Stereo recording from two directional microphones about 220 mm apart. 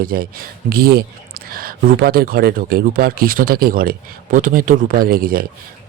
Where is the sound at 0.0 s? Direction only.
40° right (ahead or behind).